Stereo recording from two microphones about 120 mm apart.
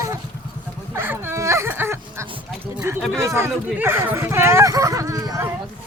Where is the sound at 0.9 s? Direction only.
20° right (ahead or behind).